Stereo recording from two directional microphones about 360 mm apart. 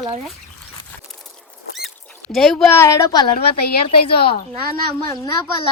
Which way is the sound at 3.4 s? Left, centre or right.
Left.